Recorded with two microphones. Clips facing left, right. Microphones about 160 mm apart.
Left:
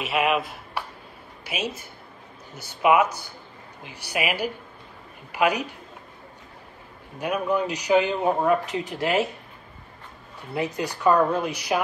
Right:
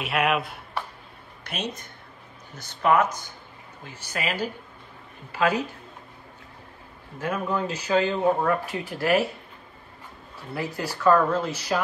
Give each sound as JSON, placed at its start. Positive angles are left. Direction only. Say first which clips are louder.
{"t": 0.0, "sound": "speech", "louder": "left 1 dB", "side_deg": 0}
{"t": 7.2, "sound": "speech", "louder": "left 3 dB", "side_deg": 15}
{"t": 10.5, "sound": "speech", "louder": "left 3 dB", "side_deg": 20}